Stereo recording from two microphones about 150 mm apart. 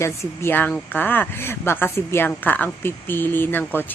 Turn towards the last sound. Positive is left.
turn(degrees=15)  # may be behind; listen again after turning